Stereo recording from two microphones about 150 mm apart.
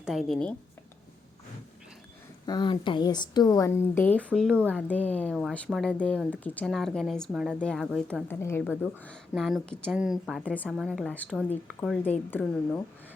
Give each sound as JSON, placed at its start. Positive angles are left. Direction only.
{"t": 0.0, "sound": "a woman's voice", "side_deg": 0}
{"t": 2.5, "sound": "speech", "side_deg": 30}
{"t": 4.5, "sound": "speech", "side_deg": -15}
{"t": 4.8, "sound": "a woman's voice", "side_deg": 10}
{"t": 8.3, "sound": "speech", "side_deg": 15}
{"t": 9.3, "sound": "a woman's voice", "side_deg": 0}
{"t": 10.4, "sound": "speech", "side_deg": 10}
{"t": 10.7, "sound": "a woman's voice", "side_deg": 0}